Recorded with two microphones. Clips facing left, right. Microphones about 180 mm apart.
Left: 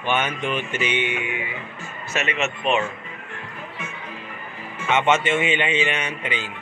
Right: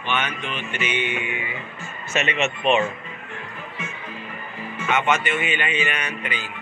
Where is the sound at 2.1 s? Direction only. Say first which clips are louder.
Right 2 dB; centre (ahead or behind).